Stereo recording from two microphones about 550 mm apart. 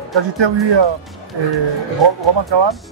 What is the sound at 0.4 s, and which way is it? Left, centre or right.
Speech, right.